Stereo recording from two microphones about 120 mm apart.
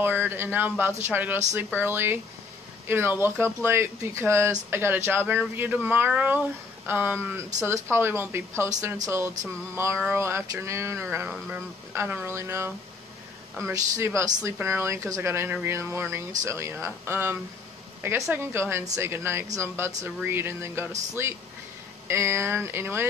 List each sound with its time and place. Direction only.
0.0 s speech: 15° right (ahead or behind)